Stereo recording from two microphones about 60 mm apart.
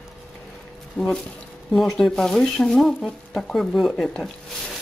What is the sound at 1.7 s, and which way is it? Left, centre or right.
Speech, centre.